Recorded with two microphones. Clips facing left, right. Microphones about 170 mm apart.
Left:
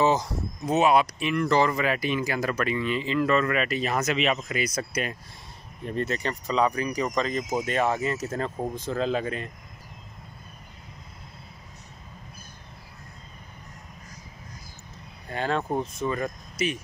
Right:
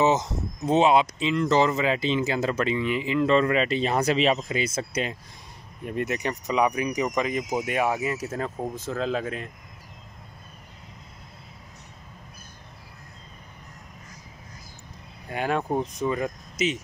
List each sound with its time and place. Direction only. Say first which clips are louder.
0.0 s speech: right 1 dB; 20° right (ahead or behind)
5.9 s speech: right 1 dB; 15° right (ahead or behind)
15.2 s speech: right 1 dB; 10° right (ahead or behind)